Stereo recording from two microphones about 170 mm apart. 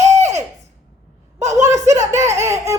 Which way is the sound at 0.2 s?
40° right (ahead or behind).